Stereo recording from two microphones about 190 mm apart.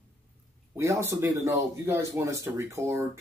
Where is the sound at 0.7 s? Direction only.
15° right (ahead or behind).